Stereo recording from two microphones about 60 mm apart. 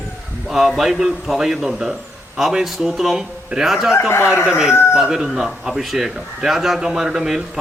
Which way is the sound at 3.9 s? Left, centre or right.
Left.